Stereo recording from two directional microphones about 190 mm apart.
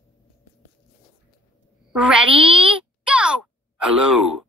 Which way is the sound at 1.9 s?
5° right (ahead or behind).